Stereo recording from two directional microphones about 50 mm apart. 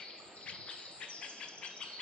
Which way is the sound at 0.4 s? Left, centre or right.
Left.